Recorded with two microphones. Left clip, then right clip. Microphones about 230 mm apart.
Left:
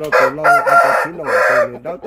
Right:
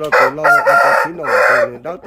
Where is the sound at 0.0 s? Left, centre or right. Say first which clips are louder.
Right 1 dB; centre.